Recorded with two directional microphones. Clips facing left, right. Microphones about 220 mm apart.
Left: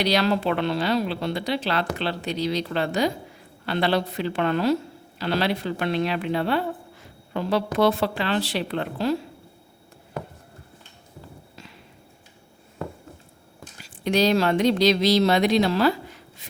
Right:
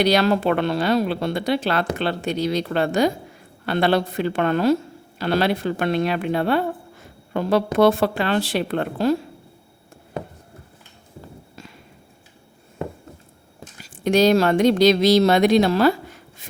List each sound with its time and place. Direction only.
0.0 s speech: 50° right (ahead or behind)
14.0 s speech: 45° right (ahead or behind)
16.4 s a sound: 50° right (ahead or behind)